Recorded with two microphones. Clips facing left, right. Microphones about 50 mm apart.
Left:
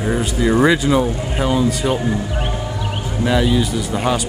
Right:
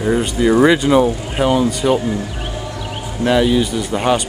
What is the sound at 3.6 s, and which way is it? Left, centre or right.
Speech, right.